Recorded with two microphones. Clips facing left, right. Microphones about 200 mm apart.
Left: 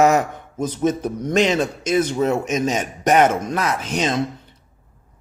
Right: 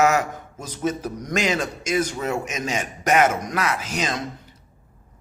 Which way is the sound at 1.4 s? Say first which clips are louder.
Left 6 dB; 10° right (ahead or behind).